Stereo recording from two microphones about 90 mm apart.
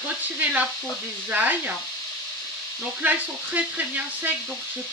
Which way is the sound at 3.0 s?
20° right (ahead or behind).